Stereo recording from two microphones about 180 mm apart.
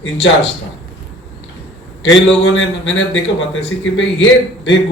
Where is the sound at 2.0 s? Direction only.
90° left.